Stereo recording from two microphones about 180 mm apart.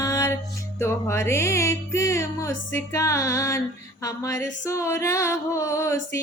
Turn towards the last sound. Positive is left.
turn(degrees=15)  # may be behind; listen again after turning